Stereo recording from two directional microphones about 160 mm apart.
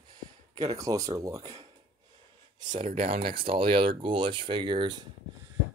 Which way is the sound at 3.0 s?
40° right (ahead or behind).